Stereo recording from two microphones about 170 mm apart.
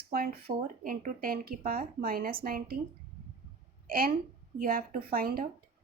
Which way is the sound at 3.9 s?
60° right (ahead or behind).